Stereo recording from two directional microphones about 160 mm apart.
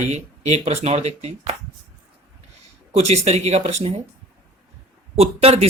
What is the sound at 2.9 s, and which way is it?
Speech, 40° right (ahead or behind).